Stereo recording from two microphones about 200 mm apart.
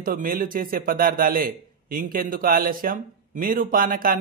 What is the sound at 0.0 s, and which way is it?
A man's voice, 45° right (ahead or behind).